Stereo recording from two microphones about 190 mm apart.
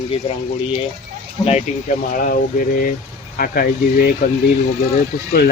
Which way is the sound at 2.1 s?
45° left (ahead or behind).